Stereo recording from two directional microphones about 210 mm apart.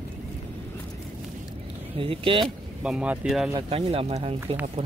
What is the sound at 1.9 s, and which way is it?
Speech, 25° right (ahead or behind).